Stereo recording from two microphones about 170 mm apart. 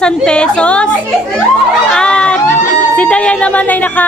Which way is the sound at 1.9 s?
5° left (ahead or behind).